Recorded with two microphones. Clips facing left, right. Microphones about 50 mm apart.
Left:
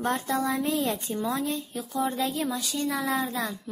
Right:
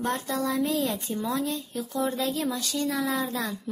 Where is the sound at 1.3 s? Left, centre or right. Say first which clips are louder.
Even; centre.